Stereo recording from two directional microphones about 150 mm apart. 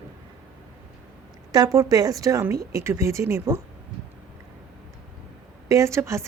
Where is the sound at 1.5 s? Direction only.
25° right (ahead or behind).